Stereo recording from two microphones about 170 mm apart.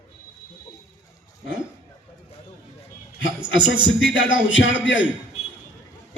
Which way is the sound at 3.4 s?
25° right (ahead or behind).